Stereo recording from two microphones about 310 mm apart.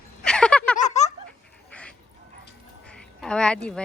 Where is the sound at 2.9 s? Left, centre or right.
Centre.